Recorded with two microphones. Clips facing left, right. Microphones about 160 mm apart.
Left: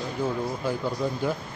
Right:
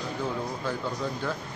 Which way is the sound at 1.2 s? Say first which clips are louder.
Left 5 dB; 15° left (ahead or behind).